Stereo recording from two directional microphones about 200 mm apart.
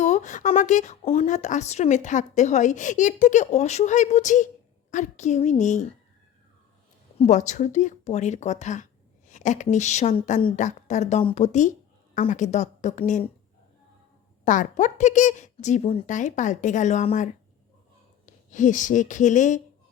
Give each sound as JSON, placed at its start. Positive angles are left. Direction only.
{"t": 0.0, "sound": "speech", "side_deg": 35}
{"t": 7.2, "sound": "speech", "side_deg": 35}
{"t": 14.4, "sound": "speech", "side_deg": 40}
{"t": 18.3, "sound": "speech", "side_deg": 40}